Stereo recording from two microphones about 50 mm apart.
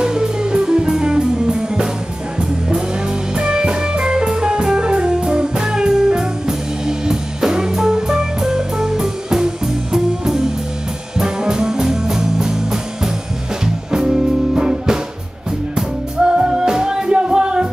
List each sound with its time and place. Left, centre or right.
0.0 s music: centre
3.3 s music: centre
13.9 s music: centre